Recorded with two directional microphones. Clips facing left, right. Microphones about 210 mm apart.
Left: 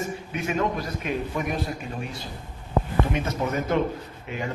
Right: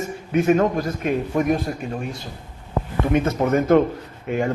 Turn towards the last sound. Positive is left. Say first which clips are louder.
# right 9 dB
turn(degrees=-50)  # may be behind; listen again after turning